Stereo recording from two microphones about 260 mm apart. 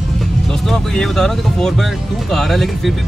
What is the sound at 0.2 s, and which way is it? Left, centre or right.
Speech, centre.